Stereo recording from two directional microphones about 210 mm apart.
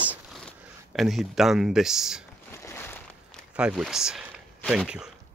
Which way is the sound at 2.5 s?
10° left (ahead or behind).